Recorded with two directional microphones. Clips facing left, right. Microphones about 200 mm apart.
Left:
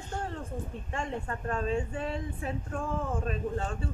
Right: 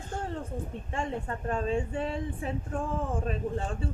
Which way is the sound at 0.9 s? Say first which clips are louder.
Right 2 dB; 30° right (ahead or behind).